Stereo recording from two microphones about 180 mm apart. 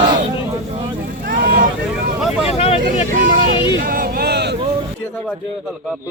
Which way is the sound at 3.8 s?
55° right (ahead or behind).